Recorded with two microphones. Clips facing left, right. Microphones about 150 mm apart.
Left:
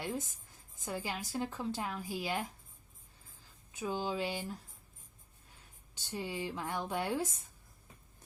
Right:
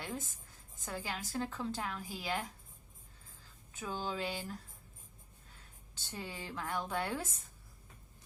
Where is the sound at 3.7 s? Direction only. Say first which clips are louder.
Left 3 dB; 15° left (ahead or behind).